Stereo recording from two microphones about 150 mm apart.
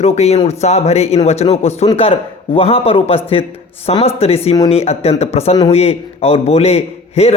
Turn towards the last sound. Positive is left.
turn(degrees=45)  # may be behind; listen again after turning